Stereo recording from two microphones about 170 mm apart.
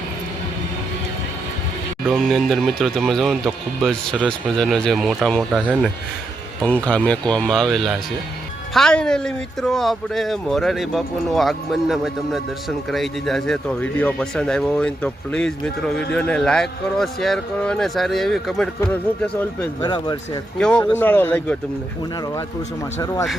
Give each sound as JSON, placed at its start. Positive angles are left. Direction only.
{"t": 2.0, "sound": "speech", "side_deg": 0}
{"t": 19.8, "sound": "speech", "side_deg": 25}
{"t": 20.6, "sound": "speech", "side_deg": 5}